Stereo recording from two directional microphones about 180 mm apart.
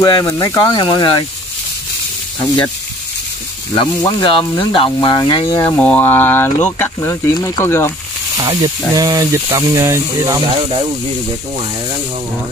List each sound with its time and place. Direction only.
0.0 s speech: 20° left (ahead or behind)
3.7 s speech: 25° left (ahead or behind)
5.8 s speech: 10° left (ahead or behind)
8.4 s speech: 25° right (ahead or behind)